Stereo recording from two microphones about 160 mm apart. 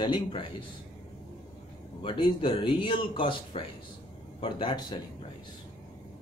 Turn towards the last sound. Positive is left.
turn(degrees=30)  # may be behind; listen again after turning